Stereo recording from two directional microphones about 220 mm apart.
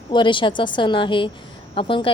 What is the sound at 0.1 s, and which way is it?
A woman's voice, 20° left (ahead or behind).